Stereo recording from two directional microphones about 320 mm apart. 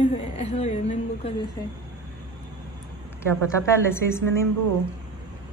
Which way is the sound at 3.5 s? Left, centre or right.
Centre.